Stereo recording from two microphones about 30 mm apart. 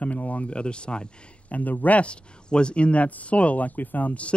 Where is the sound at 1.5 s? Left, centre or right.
Left.